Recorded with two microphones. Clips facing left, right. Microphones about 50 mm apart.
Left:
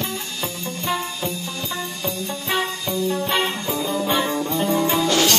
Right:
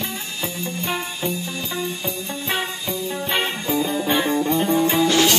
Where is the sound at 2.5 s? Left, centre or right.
Centre.